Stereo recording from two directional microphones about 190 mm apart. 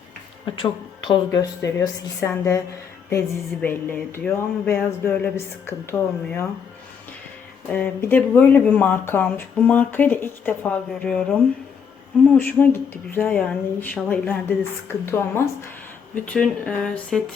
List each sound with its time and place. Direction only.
0.6 s speech: 20° left (ahead or behind)
7.7 s speech: 10° left (ahead or behind)